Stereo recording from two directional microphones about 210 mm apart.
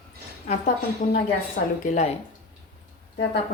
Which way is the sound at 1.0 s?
40° left (ahead or behind).